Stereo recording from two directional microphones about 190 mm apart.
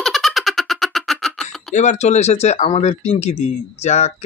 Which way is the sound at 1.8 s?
35° left (ahead or behind).